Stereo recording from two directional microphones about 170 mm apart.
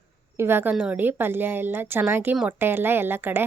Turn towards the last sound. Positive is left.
turn(degrees=-10)  # may be behind; listen again after turning